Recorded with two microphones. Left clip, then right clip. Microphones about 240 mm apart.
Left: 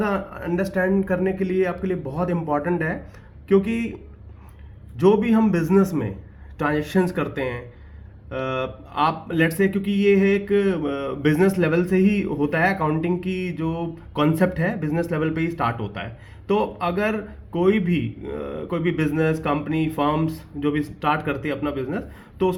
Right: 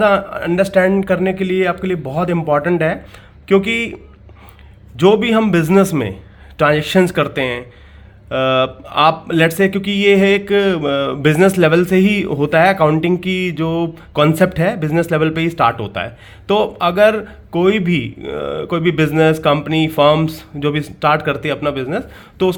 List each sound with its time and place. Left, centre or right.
0.0 s speech: right
4.9 s speech: right
5.6 s speech: right
6.6 s speech: right